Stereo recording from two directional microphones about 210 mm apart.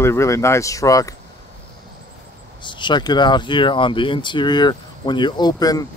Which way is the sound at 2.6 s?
20° left (ahead or behind).